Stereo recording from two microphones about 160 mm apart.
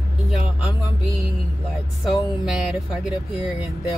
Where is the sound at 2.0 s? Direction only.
5° right (ahead or behind).